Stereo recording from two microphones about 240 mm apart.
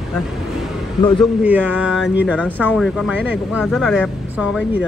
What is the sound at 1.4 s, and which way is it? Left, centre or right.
Speech, centre.